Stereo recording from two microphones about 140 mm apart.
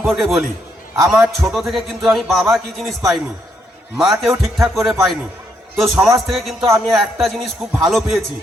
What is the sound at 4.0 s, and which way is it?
Speech, centre (ahead or behind).